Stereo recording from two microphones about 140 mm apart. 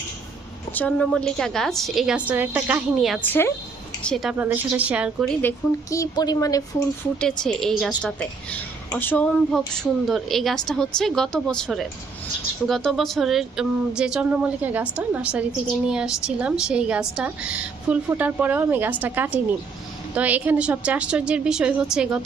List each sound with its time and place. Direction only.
0.7 s a woman's voice: 10° left (ahead or behind); by 3.2 s 5° right (ahead or behind)
3.2 s a woman's voice: 15° left (ahead or behind)
4.0 s a woman's voice: centre (ahead or behind)
4.4 s speech: 15° right (ahead or behind)
5.4 s a woman's voice: 20° left (ahead or behind)
7.2 s a woman's voice: 5° left (ahead or behind)